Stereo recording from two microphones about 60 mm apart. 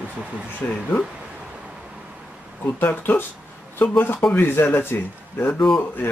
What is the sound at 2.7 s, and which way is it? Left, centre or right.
Speech, left.